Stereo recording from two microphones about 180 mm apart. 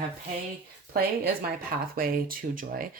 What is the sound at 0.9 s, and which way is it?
Speech, 55° right (ahead or behind).